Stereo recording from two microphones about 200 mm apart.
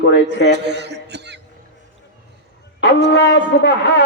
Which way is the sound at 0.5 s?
60° right (ahead or behind).